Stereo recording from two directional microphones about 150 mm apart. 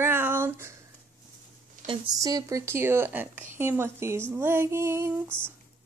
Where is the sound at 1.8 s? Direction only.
60° right (ahead or behind).